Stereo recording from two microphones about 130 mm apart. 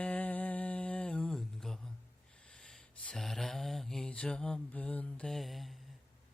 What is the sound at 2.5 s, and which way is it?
Mantra, 5° left (ahead or behind).